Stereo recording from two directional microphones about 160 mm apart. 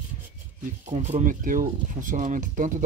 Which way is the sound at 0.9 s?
45° right (ahead or behind).